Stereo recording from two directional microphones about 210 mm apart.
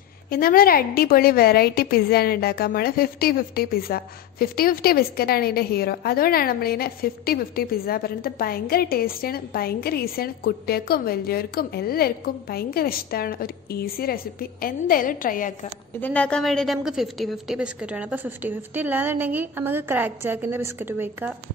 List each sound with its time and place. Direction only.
0.3 s a woman's voice: 45° left (ahead or behind)
16.0 s a woman's voice: 5° left (ahead or behind); by 21.3 s 10° right (ahead or behind)